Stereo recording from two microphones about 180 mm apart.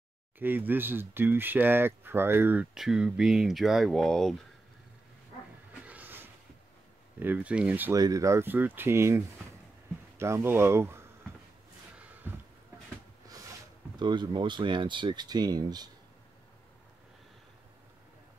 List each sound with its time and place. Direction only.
0.4 s speech: 10° right (ahead or behind)
5.9 s vehicle: 10° right (ahead or behind)
7.2 s speech: 10° right (ahead or behind)
12.0 s a sound: 10° right (ahead or behind)
13.3 s speech: 20° right (ahead or behind)